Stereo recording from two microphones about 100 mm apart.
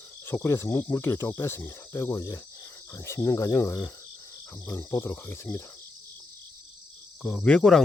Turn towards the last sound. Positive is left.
turn(degrees=10)  # may be behind; listen again after turning